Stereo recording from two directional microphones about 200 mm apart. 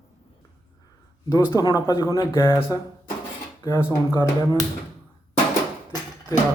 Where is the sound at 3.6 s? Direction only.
10° left (ahead or behind).